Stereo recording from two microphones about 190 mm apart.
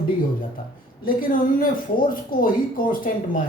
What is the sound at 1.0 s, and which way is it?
Speech, 45° left (ahead or behind).